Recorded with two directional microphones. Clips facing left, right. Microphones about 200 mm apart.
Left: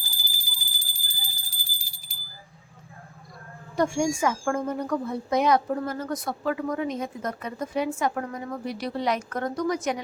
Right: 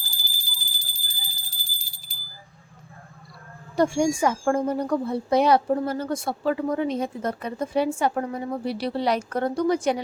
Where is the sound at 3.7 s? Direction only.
35° right (ahead or behind).